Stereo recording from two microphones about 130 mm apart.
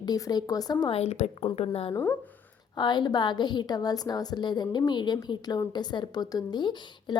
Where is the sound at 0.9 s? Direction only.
55° left (ahead or behind).